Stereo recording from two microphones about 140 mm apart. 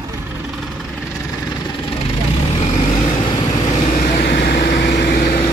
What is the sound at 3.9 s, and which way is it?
Vehicle, 85° left.